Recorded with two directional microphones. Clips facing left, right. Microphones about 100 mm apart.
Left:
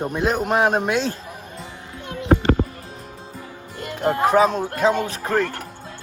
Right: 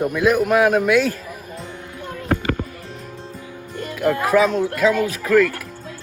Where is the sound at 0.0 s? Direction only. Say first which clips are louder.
Right 4 dB; 35° left (ahead or behind).